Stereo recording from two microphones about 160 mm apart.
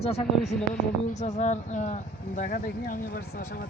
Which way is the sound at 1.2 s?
45° left (ahead or behind).